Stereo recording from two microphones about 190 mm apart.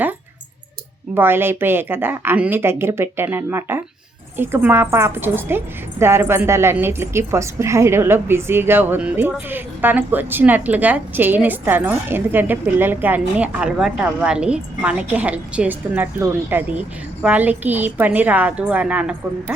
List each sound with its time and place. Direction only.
1.1 s a woman's voice: 10° right (ahead or behind)